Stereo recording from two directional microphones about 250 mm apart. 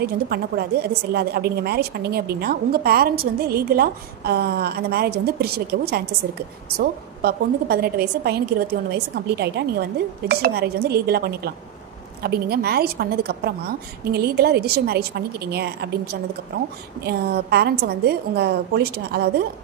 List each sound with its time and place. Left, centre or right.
0.0 s a woman's voice: right
17.0 s a woman's voice: right